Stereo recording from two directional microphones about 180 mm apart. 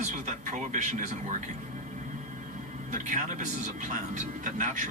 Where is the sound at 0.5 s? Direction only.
45° right (ahead or behind).